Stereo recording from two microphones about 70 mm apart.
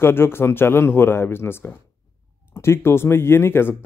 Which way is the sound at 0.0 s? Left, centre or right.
Left.